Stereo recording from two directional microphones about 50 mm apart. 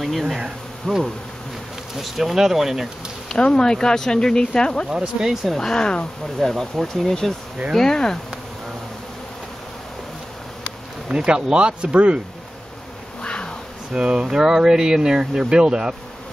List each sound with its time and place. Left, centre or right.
0.0 s speech: centre
3.3 s speech: centre
4.8 s speech: centre
5.5 s speech: centre
6.5 s speech: centre
11.1 s speech: centre
13.2 s insect: centre
13.9 s speech: centre